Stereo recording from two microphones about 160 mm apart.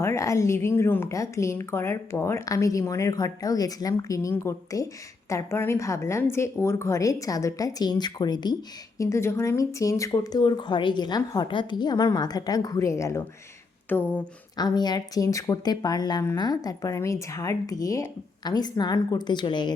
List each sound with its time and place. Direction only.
0.0 s speech: 20° left (ahead or behind)
14.6 s speech: 25° left (ahead or behind)